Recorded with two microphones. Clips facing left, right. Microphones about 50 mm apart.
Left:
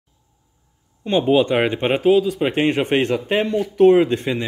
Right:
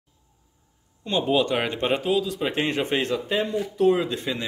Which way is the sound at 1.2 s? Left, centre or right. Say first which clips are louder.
Left 6 dB; left.